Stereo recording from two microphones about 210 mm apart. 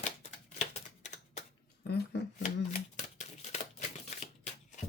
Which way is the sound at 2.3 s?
35° left (ahead or behind).